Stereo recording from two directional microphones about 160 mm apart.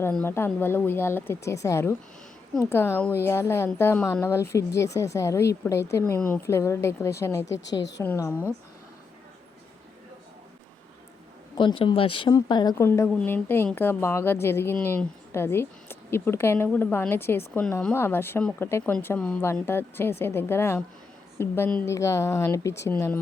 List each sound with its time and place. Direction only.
0.0 s a woman's voice: 10° left (ahead or behind)
7.8 s a woman's voice: 90° left
8.0 s a woman's voice: 15° left (ahead or behind)
11.5 s a woman's voice: 30° left (ahead or behind); by 23.2 s 10° left (ahead or behind)